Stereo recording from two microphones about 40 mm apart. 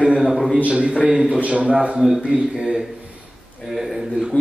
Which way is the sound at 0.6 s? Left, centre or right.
Right.